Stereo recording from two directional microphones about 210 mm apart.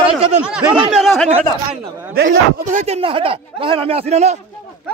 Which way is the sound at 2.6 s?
30° right (ahead or behind).